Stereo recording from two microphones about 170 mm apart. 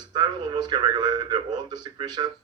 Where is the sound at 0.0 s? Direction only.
25° right (ahead or behind).